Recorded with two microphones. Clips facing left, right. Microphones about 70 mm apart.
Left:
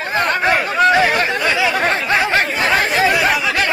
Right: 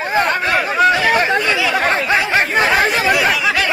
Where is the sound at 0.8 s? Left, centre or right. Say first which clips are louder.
Even; centre.